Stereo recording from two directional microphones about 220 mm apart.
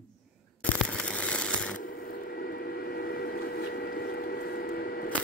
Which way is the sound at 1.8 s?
40° left (ahead or behind).